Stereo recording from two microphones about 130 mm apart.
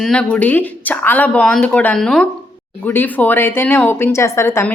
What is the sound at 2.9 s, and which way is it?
Speech, 15° left (ahead or behind).